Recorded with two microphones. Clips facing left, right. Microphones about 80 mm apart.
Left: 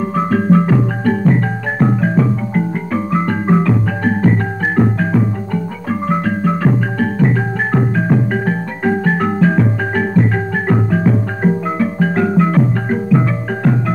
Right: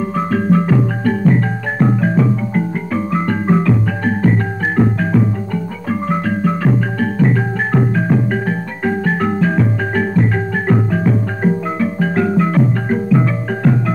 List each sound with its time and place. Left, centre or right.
0.1 s music: left